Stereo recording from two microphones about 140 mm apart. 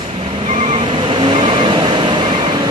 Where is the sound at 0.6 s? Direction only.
40° right (ahead or behind).